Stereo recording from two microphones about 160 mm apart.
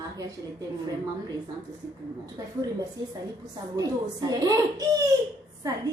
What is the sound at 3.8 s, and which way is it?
Speech, 20° right (ahead or behind).